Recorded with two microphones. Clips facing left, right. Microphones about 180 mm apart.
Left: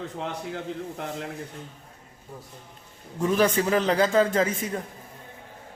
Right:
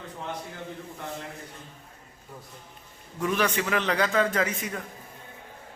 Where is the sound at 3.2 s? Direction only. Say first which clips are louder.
Left 4 dB; 30° left (ahead or behind).